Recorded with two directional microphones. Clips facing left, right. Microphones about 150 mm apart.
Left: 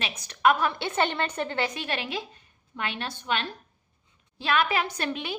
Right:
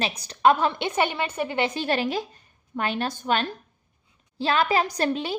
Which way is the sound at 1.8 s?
40° right (ahead or behind).